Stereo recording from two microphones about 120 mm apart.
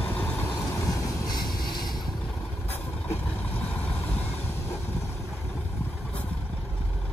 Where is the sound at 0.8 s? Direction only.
35° left (ahead or behind).